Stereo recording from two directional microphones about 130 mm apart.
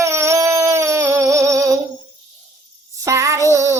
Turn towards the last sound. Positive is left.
turn(degrees=-25)  # may be behind; listen again after turning